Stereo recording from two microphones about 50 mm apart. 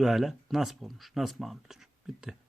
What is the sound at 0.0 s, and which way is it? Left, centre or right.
Speech, centre.